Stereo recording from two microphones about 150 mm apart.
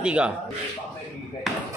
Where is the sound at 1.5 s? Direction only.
Centre (ahead or behind).